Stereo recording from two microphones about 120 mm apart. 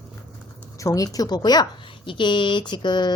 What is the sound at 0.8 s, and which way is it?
Speech, 30° left (ahead or behind).